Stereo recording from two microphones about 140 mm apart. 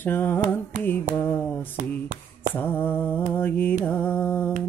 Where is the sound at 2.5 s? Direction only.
15° left (ahead or behind).